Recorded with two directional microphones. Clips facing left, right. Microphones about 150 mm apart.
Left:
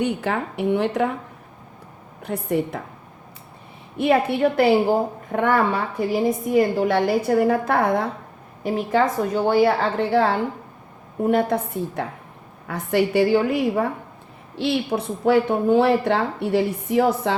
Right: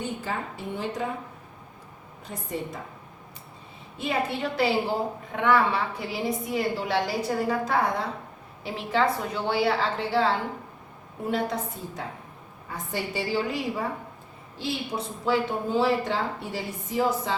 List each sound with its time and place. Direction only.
0.0 s a woman's voice: 70° left (ahead or behind)
2.2 s a woman's voice: 65° left (ahead or behind)
3.9 s a woman's voice: 60° left (ahead or behind)
8.6 s a woman's voice: 45° left (ahead or behind)
12.6 s a woman's voice: 70° left (ahead or behind)
14.5 s a woman's voice: 70° left (ahead or behind)